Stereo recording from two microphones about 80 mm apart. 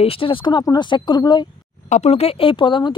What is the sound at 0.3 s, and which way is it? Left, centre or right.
Speech, left.